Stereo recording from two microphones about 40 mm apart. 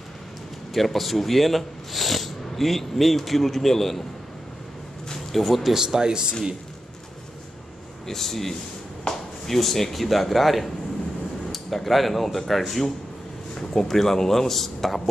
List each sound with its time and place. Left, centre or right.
0.7 s speech: centre
5.3 s speech: centre
5.8 s speech: centre
8.1 s a man's voice: centre